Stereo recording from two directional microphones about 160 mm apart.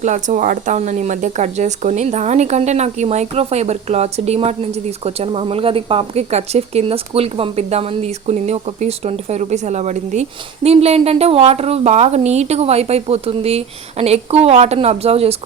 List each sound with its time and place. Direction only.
0.0 s speech: 50° right (ahead or behind)